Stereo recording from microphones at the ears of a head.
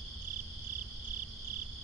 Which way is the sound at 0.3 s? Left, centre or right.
Right.